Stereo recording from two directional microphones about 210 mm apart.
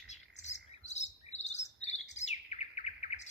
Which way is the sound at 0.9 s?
35° left (ahead or behind).